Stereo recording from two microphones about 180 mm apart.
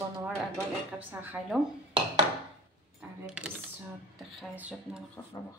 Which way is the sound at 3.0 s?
5° right (ahead or behind).